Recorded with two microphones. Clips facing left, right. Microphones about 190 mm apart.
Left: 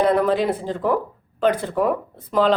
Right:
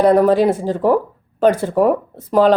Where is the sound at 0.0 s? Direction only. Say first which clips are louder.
Right 6 dB; 40° right (ahead or behind).